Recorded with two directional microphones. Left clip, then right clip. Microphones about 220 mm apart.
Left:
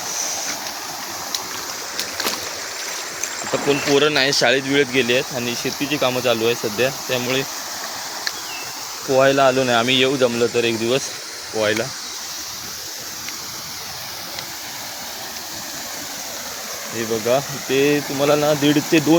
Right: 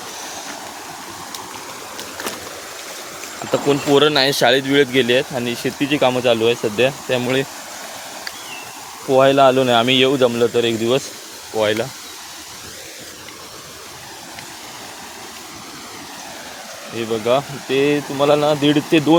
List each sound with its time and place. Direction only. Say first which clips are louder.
0.2 s waves: left 6 dB; 5° right (ahead or behind)
3.7 s speech: right 2 dB; 25° right (ahead or behind)
9.0 s speech: right 3 dB; 20° right (ahead or behind)
17.0 s speech: right 2 dB; 5° right (ahead or behind)